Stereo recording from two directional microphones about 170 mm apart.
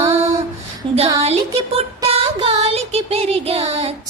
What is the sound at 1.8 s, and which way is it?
Child singing, 35° right (ahead or behind).